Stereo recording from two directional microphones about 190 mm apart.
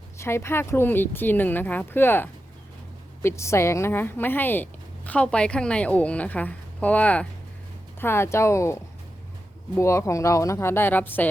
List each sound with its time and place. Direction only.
0.2 s a woman's voice: 15° left (ahead or behind)